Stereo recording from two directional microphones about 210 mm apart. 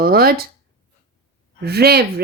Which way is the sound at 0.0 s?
45° right (ahead or behind).